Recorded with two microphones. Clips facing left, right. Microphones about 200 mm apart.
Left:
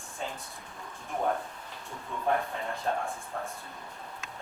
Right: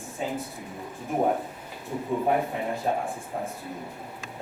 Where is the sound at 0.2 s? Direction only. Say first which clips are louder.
Right 7 dB; 10° right (ahead or behind).